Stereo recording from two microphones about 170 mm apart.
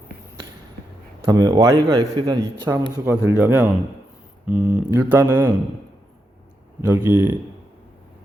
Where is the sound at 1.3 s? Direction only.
20° right (ahead or behind).